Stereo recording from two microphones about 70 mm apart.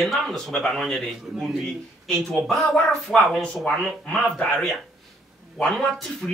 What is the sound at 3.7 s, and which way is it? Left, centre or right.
A man's voice, centre.